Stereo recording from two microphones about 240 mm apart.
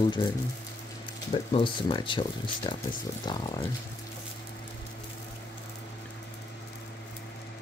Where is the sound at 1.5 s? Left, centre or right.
Left.